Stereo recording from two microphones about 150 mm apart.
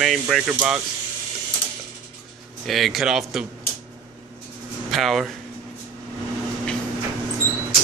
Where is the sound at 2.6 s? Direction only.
Centre (ahead or behind).